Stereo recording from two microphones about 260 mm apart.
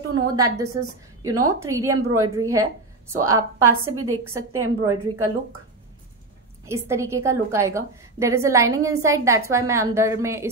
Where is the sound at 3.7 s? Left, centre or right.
Right.